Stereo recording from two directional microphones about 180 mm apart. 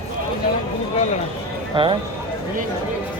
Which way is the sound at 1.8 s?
25° right (ahead or behind).